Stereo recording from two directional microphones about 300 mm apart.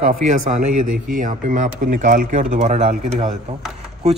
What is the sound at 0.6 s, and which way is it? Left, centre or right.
Speech, right.